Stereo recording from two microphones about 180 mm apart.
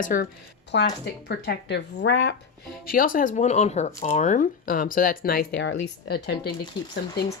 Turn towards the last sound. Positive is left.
turn(degrees=60)  # may be behind; listen again after turning